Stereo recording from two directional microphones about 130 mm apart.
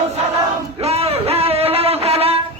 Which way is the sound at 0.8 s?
50° right (ahead or behind).